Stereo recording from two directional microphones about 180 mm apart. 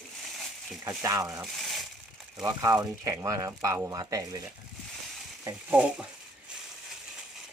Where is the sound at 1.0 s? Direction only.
20° right (ahead or behind).